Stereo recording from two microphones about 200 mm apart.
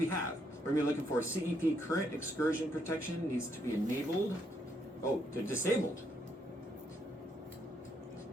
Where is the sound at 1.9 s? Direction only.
15° left (ahead or behind).